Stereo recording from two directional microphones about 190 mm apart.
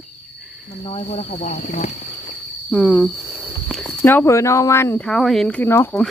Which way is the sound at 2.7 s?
Centre (ahead or behind).